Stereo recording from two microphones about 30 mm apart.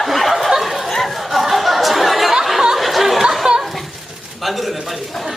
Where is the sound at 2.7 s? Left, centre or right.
Centre.